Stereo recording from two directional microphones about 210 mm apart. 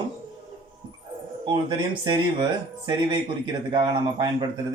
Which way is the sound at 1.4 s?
20° right (ahead or behind).